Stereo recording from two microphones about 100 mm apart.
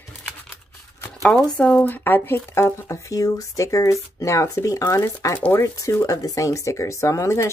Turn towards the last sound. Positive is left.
turn(degrees=30)  # may be behind; listen again after turning